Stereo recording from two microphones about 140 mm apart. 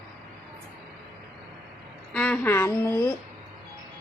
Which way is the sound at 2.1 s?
10° left (ahead or behind).